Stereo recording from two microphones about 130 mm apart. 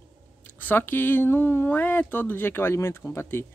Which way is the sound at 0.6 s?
15° left (ahead or behind).